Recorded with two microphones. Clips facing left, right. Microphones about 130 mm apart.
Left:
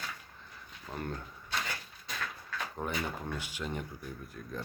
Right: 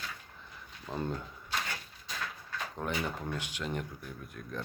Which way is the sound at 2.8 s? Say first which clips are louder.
Right 1 dB; 5° left (ahead or behind).